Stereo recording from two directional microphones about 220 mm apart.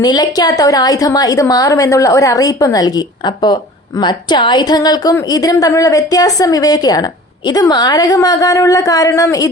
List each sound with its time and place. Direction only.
0.0 s a woman's voice: 15° left (ahead or behind)